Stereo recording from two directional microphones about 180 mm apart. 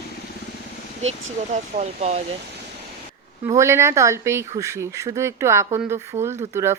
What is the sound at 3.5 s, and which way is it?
Speech, 15° right (ahead or behind).